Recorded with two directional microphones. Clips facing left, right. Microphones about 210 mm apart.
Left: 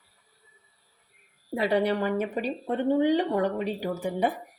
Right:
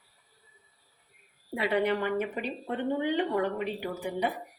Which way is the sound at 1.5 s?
40° left (ahead or behind).